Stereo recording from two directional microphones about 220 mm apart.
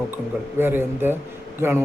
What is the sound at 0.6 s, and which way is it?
Speech, 10° right (ahead or behind).